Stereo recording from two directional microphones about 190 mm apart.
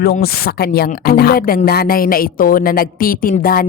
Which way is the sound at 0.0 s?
55° left (ahead or behind).